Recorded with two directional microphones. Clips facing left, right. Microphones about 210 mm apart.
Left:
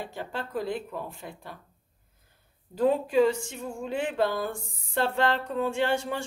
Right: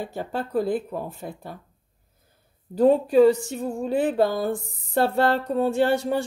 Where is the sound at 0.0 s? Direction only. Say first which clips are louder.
Right 6 dB; 40° right (ahead or behind).